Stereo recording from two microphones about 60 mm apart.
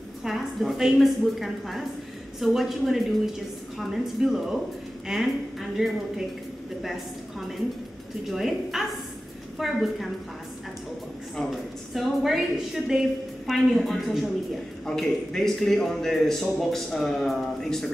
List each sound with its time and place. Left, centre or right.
0.2 s a sound: centre
0.7 s a man's voice: centre
11.9 s a man's voice: centre